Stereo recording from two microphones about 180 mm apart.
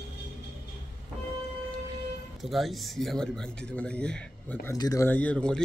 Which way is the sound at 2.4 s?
Centre (ahead or behind).